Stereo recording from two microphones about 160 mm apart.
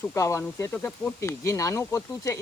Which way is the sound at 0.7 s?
5° left (ahead or behind).